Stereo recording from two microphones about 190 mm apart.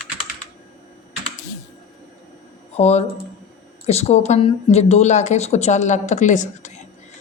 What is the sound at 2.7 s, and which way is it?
A woman's voice, 35° left (ahead or behind).